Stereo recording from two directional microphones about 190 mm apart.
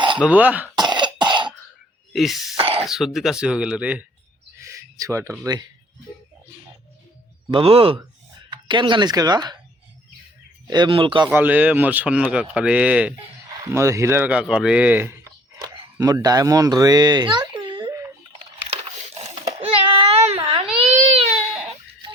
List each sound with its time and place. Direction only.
0.2 s speech: 10° right (ahead or behind)
0.8 s cough: 25° right (ahead or behind)
2.1 s speech: centre (ahead or behind)
2.6 s speech: 30° right (ahead or behind)
2.8 s speech: centre (ahead or behind)
4.6 s a sound: 15° right (ahead or behind)
7.5 s speech: 30° right (ahead or behind)
10.7 s speech: 25° right (ahead or behind)
11.3 s speech: 10° right (ahead or behind)
18.7 s a sound: 35° right (ahead or behind)
19.5 s baby cry: 35° right (ahead or behind)